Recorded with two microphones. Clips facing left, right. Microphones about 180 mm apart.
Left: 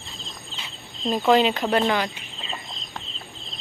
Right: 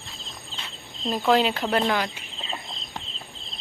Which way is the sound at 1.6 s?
10° left (ahead or behind).